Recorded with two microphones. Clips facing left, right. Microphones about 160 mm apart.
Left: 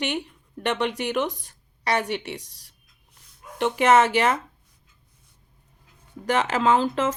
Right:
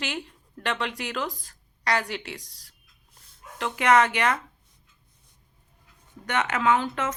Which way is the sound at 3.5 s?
25° left (ahead or behind).